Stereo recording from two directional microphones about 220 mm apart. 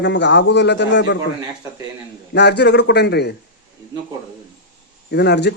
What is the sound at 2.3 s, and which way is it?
A man's voice, 50° left (ahead or behind).